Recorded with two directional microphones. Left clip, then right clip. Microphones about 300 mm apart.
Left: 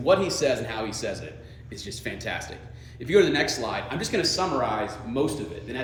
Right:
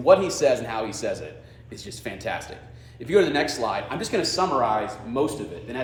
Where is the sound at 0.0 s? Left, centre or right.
Centre.